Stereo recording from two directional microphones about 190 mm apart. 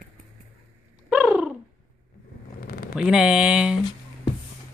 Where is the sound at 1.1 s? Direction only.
5° right (ahead or behind).